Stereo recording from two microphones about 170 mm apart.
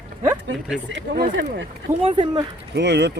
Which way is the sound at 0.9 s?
90° right.